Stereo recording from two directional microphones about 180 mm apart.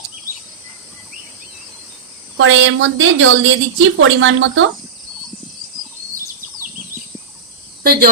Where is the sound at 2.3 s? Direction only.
90° right.